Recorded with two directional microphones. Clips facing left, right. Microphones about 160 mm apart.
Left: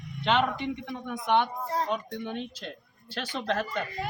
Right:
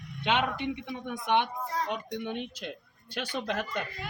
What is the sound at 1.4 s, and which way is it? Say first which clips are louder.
Speech: left 3 dB; 35° left (ahead or behind).